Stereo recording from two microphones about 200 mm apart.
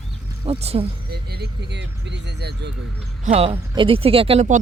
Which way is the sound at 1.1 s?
55° right (ahead or behind).